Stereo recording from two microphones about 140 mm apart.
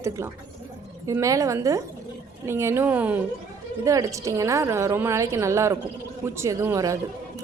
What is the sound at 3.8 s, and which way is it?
Speech, 20° right (ahead or behind).